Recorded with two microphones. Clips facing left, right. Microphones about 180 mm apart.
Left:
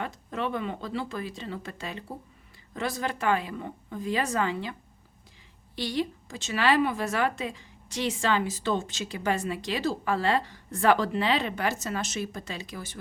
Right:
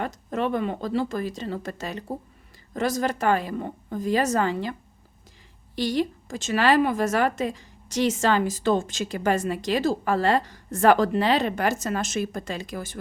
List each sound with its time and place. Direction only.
0.0 s a woman's voice: 45° right (ahead or behind)
5.7 s a woman's voice: 45° right (ahead or behind)